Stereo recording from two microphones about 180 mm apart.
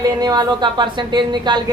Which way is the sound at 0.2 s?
25° right (ahead or behind).